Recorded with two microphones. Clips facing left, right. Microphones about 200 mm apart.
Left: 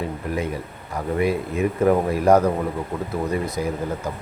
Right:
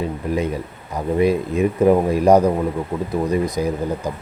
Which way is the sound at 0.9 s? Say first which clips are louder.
Right 4 dB; 20° right (ahead or behind).